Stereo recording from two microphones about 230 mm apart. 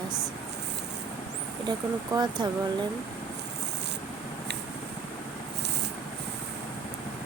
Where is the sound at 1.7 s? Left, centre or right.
Centre.